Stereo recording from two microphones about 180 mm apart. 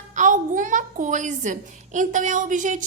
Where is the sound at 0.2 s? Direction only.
45° right (ahead or behind).